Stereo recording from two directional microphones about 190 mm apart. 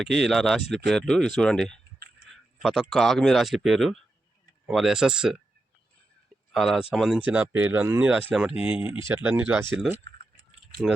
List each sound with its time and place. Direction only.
0.0 s speech: centre (ahead or behind)
2.2 s a sound: 65° right (ahead or behind)
2.6 s speech: centre (ahead or behind)
6.5 s speech: centre (ahead or behind)
10.8 s speech: centre (ahead or behind)